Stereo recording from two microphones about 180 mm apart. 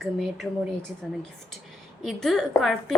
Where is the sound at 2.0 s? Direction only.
Centre (ahead or behind).